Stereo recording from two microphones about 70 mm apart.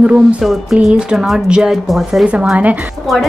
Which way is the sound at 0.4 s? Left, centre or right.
Centre.